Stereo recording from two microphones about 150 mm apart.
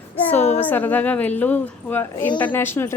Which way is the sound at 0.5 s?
10° left (ahead or behind).